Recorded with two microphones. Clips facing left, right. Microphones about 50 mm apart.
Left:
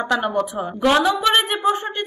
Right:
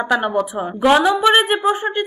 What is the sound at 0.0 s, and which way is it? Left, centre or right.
A woman's voice, centre.